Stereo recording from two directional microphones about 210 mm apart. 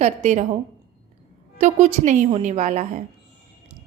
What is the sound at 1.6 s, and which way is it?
A woman's voice, 35° right (ahead or behind).